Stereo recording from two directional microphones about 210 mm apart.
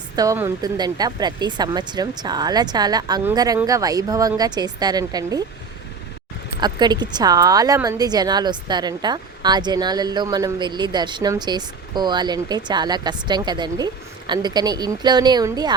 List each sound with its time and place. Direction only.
0.2 s a woman's voice: 15° right (ahead or behind)
6.6 s a woman's voice: 20° right (ahead or behind)